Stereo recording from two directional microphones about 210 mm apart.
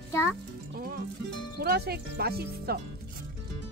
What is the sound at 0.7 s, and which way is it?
Music, 45° right (ahead or behind).